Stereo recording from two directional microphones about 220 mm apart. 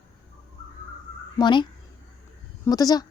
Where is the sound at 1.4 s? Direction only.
20° left (ahead or behind).